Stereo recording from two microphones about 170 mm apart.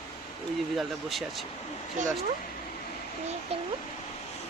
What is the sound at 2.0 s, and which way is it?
Speech, 45° right (ahead or behind).